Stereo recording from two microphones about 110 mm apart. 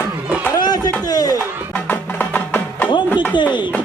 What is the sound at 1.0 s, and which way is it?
Speech, 35° left (ahead or behind).